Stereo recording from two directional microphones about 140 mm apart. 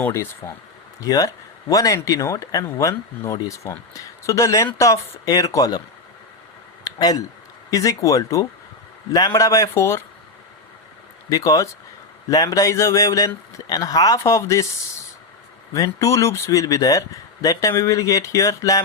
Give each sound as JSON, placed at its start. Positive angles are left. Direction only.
{"t": 0.0, "sound": "speech", "side_deg": 20}
{"t": 6.8, "sound": "speech", "side_deg": 25}
{"t": 11.3, "sound": "speech", "side_deg": 25}
{"t": 15.7, "sound": "speech", "side_deg": 20}